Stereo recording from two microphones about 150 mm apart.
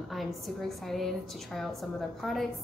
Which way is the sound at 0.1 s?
Centre (ahead or behind).